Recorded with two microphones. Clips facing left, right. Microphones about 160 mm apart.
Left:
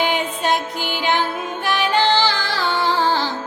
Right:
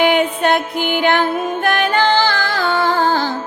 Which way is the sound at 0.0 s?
60° right (ahead or behind).